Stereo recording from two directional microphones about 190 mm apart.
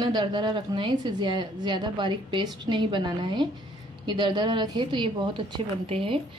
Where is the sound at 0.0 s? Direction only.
25° right (ahead or behind).